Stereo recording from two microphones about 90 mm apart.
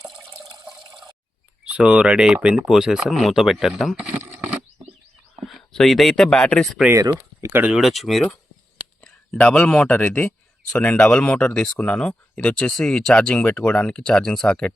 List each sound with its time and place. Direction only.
0.2 s water: 35° right (ahead or behind)
1.6 s speech: 10° right (ahead or behind)
5.5 s speech: centre (ahead or behind)
7.1 s speech: 25° right (ahead or behind)
7.7 s speech: centre (ahead or behind)